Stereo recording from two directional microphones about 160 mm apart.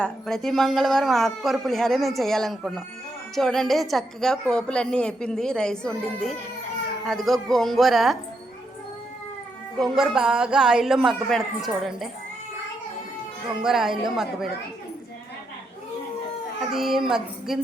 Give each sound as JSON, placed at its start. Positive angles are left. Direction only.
{"t": 0.0, "sound": "a woman's voice", "side_deg": 0}
{"t": 9.9, "sound": "a woman's voice", "side_deg": -5}
{"t": 13.6, "sound": "a woman's voice", "side_deg": -5}
{"t": 16.7, "sound": "a woman's voice", "side_deg": 0}